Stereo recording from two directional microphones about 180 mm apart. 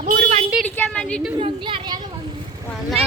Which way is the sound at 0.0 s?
45° right (ahead or behind).